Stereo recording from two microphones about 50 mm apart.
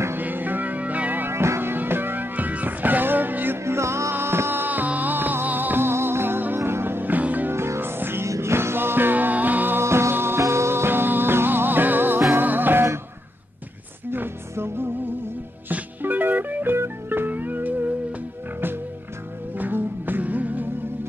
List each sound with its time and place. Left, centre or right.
0.2 s music: right
1.3 s music: right
3.6 s music: right
4.1 s music: right
7.5 s music: right
8.3 s music: right
9.8 s music: right
10.4 s music: right
14.5 s music: right
16.0 s music: right
16.7 s music: right
17.3 s music: right
19.5 s music: right